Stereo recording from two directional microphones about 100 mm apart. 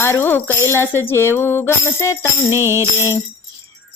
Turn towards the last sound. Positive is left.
turn(degrees=-25)  # may be behind; listen again after turning